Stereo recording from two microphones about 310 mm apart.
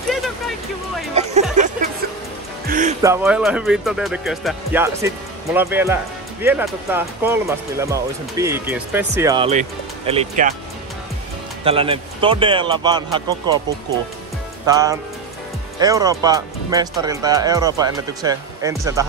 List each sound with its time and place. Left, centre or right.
1.1 s a sound: right
2.6 s music: right
3.0 s speech: centre
11.6 s speech: centre
14.7 s speech: centre